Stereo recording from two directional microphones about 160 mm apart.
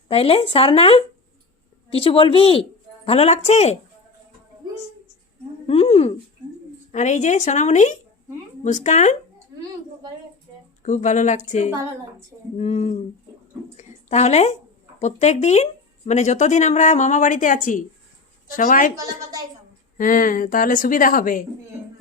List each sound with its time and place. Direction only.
0.1 s a woman's voice: 35° left (ahead or behind)
5.6 s speech: 40° left (ahead or behind)
6.9 s speech: 50° left (ahead or behind)
10.8 s a woman's voice: 50° left (ahead or behind)
20.0 s a woman's voice: 60° left (ahead or behind)